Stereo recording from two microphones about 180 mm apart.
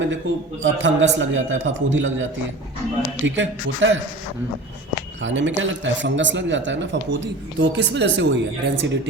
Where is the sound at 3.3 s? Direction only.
90° right.